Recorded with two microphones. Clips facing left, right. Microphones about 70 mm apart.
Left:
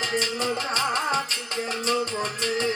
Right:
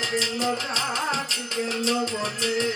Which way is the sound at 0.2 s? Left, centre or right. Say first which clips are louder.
Right 1 dB; left.